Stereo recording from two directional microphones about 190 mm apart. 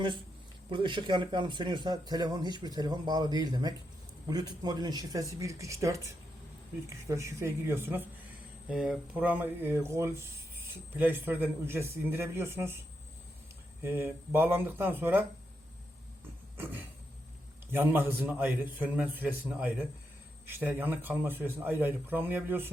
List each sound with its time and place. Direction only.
0.7 s a man's voice: 25° right (ahead or behind)
13.8 s a man's voice: 10° right (ahead or behind)
16.6 s a man's voice: 10° right (ahead or behind)